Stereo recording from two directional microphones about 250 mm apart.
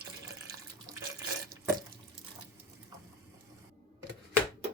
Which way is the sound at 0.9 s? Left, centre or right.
Centre.